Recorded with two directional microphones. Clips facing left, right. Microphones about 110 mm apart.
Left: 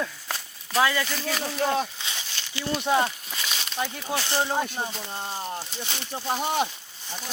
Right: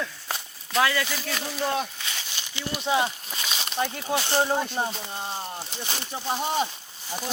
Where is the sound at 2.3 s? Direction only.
15° right (ahead or behind).